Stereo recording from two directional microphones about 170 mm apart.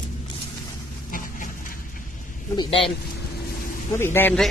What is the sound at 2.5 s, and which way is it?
Speech, 25° left (ahead or behind).